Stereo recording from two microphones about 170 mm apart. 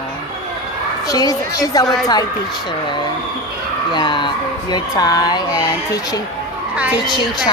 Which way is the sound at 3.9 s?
25° left (ahead or behind).